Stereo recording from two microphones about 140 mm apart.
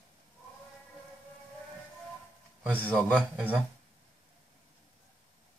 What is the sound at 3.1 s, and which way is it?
Speech, 5° right (ahead or behind).